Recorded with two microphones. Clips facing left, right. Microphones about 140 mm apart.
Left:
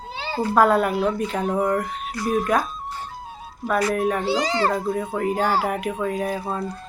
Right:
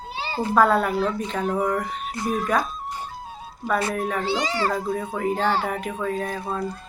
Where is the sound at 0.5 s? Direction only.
5° left (ahead or behind).